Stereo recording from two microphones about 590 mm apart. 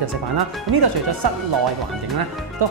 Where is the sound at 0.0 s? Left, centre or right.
Right.